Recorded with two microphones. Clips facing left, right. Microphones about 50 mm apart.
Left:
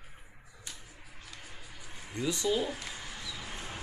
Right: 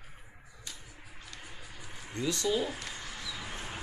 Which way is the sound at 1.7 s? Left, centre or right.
Right.